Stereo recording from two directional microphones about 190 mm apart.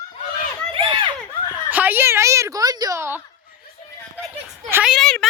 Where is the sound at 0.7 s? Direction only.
25° right (ahead or behind).